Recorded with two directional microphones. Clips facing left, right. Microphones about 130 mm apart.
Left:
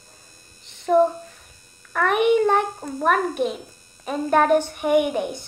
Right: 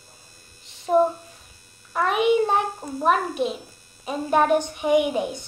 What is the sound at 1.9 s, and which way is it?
A child's voice, 55° left (ahead or behind).